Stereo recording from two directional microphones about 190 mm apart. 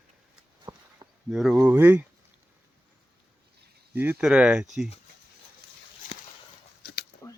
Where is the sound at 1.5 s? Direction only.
15° right (ahead or behind).